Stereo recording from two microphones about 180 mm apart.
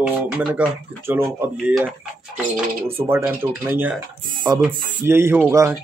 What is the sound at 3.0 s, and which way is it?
Speech, 15° right (ahead or behind).